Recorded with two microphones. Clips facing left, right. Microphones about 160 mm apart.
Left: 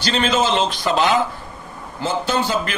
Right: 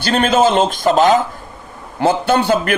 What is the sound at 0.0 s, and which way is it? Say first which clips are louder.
A man's voice: right 6 dB; 55° right (ahead or behind).